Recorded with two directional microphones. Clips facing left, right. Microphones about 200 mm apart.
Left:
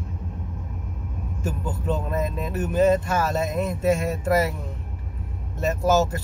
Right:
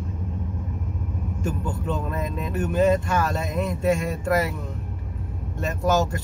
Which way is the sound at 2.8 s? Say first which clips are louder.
Left 1 dB; 40° left (ahead or behind).